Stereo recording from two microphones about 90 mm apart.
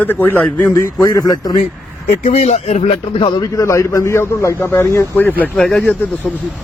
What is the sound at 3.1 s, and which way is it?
Speech, 65° left (ahead or behind).